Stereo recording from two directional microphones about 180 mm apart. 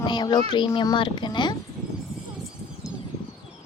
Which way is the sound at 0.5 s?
25° left (ahead or behind).